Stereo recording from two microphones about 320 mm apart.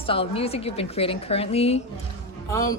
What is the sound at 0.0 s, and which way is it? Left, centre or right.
A woman's voice, centre.